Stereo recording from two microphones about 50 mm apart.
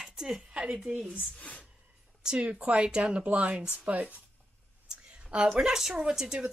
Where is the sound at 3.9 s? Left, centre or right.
Right.